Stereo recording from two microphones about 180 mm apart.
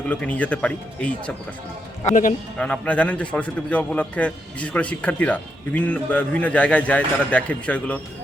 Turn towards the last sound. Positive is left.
turn(degrees=5)  # may be behind; listen again after turning